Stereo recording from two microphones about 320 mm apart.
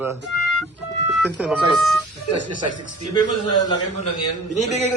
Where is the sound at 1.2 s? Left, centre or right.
Centre.